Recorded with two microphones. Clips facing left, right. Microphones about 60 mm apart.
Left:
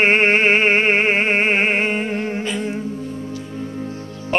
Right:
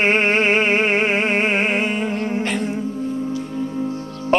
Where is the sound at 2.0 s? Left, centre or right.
Right.